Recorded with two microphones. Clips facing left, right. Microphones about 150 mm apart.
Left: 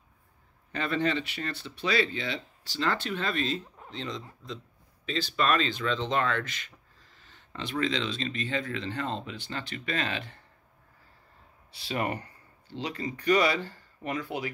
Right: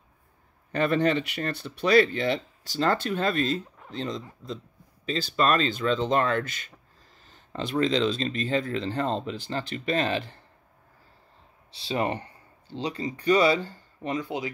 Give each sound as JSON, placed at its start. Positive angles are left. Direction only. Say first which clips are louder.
{"t": 0.7, "sound": "speech", "louder": "right 6 dB", "side_deg": -50}
{"t": 11.7, "sound": "speech", "louder": "right 4 dB", "side_deg": -25}